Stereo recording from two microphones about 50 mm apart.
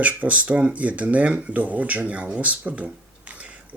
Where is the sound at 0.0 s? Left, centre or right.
Right.